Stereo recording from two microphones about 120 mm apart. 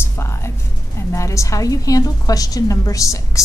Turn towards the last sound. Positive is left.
turn(degrees=25)  # may be behind; listen again after turning